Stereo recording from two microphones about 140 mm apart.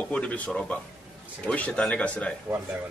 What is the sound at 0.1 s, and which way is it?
A man's voice, 10° left (ahead or behind).